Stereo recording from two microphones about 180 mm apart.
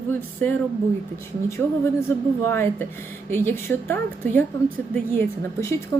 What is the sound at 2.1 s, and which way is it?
A woman's voice, 15° left (ahead or behind).